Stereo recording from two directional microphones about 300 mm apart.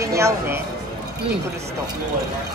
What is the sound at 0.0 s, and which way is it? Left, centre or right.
Speech, centre.